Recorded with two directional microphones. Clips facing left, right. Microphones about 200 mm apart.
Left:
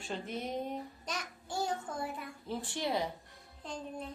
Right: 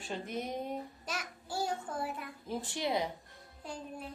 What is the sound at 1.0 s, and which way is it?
Child singing, 5° right (ahead or behind).